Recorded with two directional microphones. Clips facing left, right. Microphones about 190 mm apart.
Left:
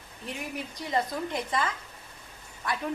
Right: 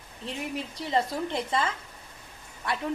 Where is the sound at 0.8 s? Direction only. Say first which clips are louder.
Right 2 dB; 25° right (ahead or behind).